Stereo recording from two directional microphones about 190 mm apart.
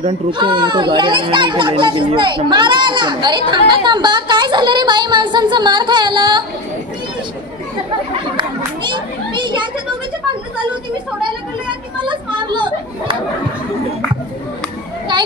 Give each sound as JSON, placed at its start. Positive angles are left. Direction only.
{"t": 0.0, "sound": "a child's voice", "side_deg": -25}
{"t": 8.4, "sound": "children playing", "side_deg": -25}
{"t": 12.0, "sound": "children playing", "side_deg": -25}